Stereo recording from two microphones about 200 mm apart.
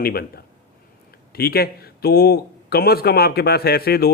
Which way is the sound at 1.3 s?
50° left (ahead or behind).